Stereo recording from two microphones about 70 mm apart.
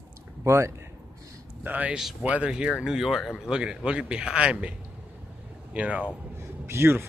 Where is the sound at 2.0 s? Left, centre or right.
Centre.